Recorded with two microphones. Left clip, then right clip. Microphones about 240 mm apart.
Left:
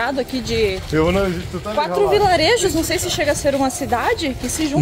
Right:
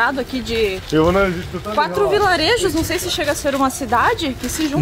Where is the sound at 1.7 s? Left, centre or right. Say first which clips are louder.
Even; centre.